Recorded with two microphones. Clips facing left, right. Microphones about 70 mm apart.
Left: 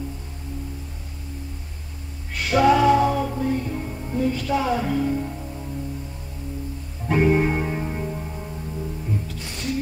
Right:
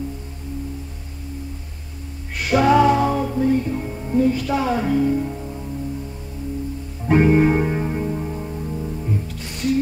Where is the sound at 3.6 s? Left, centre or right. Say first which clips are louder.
Right 4 dB; centre.